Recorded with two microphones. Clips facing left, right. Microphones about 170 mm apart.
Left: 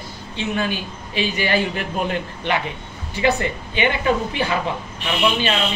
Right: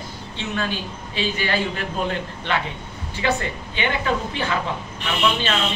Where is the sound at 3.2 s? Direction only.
15° left (ahead or behind).